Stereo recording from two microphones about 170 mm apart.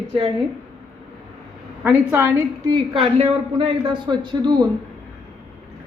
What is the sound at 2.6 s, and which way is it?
A woman's voice, 30° right (ahead or behind).